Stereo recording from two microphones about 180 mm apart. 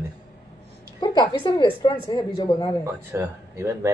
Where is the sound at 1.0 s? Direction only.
25° left (ahead or behind).